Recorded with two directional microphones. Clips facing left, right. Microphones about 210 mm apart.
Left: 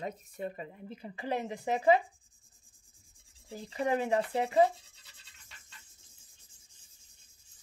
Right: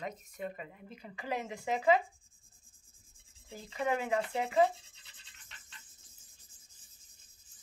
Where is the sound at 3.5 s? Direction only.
30° left (ahead or behind).